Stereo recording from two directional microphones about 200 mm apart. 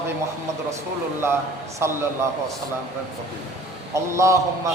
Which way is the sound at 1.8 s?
10° right (ahead or behind).